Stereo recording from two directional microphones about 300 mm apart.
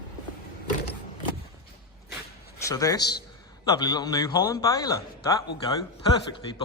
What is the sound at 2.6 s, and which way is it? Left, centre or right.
A man's voice, centre.